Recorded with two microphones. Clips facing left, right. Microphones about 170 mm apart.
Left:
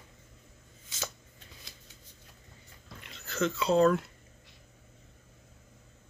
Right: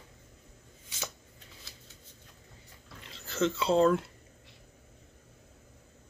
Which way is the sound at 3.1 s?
25° right (ahead or behind).